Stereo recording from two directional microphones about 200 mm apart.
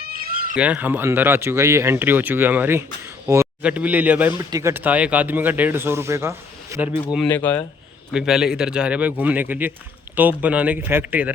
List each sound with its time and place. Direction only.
0.0 s cat: 45° right (ahead or behind)
0.5 s a man's voice: 5° right (ahead or behind)
7.3 s speech: 10° left (ahead or behind)
8.1 s a man's voice: 5° right (ahead or behind)